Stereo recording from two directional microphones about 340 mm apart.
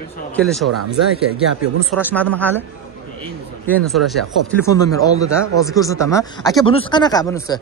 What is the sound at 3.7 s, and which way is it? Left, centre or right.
A man's voice, centre.